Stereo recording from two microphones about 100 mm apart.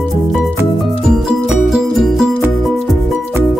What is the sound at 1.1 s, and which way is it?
Music, 5° right (ahead or behind).